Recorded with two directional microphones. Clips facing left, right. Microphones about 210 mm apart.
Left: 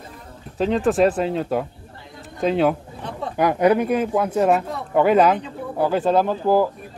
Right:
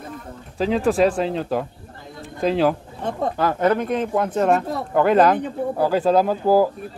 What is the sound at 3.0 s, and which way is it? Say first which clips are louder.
Speech: right 5 dB; 45° right (ahead or behind).